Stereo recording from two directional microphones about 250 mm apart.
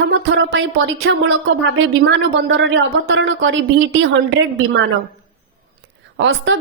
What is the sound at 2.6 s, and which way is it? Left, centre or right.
A woman's voice, right.